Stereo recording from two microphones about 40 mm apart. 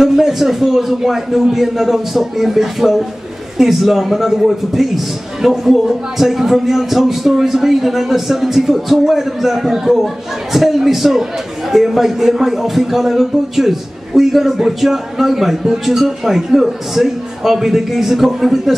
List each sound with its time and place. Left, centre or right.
0.0 s a man's voice: centre